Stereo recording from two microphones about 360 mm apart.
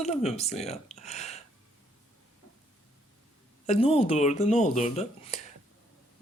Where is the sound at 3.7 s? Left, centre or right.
Centre.